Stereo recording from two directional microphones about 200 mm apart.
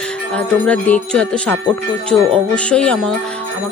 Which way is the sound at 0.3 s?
5° left (ahead or behind).